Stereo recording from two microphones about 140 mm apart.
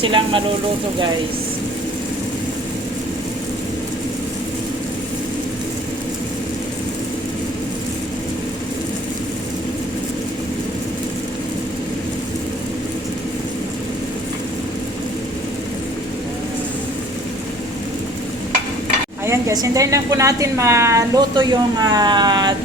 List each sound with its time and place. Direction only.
0.0 s speech: 35° right (ahead or behind)
19.2 s a woman's voice: 20° right (ahead or behind)
21.3 s speech: 30° right (ahead or behind)